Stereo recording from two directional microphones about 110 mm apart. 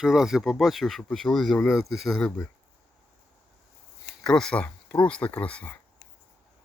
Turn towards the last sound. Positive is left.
turn(degrees=15)  # may be behind; listen again after turning